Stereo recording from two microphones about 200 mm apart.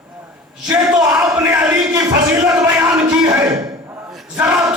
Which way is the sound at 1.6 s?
15° right (ahead or behind).